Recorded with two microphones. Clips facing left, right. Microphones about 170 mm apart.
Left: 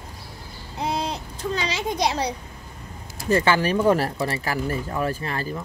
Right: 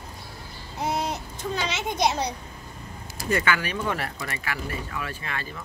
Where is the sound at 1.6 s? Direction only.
30° left (ahead or behind).